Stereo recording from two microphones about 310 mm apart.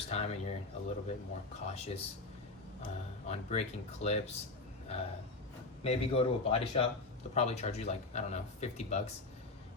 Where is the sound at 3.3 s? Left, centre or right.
Left.